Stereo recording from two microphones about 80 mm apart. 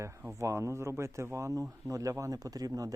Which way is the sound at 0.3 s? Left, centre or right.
Right.